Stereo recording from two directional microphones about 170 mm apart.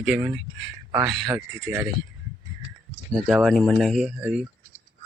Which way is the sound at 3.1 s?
Centre (ahead or behind).